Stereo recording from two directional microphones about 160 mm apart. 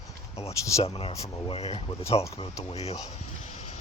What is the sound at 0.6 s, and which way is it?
Speech, 20° left (ahead or behind).